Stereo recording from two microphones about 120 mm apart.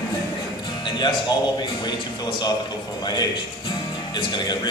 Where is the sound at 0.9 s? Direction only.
40° left (ahead or behind).